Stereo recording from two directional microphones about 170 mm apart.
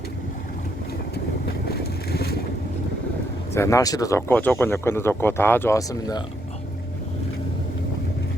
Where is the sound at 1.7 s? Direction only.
70° left (ahead or behind).